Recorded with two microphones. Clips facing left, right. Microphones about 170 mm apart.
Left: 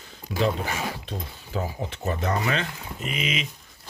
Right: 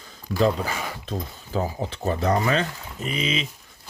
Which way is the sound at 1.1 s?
40° right (ahead or behind).